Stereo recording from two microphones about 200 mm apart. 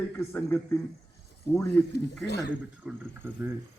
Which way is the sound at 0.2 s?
10° left (ahead or behind).